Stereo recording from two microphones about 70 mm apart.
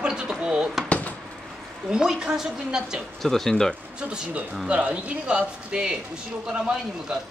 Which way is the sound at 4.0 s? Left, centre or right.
Centre.